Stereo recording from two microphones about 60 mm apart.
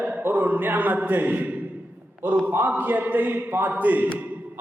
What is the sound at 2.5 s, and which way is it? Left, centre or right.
A man's voice, right.